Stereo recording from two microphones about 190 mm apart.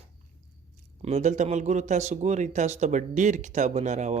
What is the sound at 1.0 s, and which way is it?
Speech, 40° right (ahead or behind).